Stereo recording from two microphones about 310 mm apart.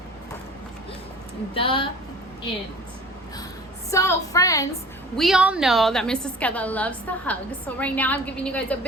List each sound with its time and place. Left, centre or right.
1.5 s a woman's voice: centre
3.9 s a woman's voice: centre
5.1 s a woman's voice: centre